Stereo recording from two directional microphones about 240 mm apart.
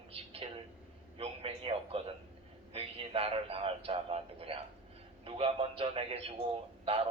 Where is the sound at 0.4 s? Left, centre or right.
Right.